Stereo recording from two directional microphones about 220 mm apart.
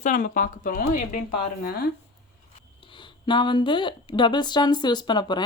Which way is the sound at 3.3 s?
20° left (ahead or behind).